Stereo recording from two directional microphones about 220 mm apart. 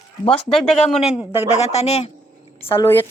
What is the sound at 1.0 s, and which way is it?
Speech, 5° right (ahead or behind).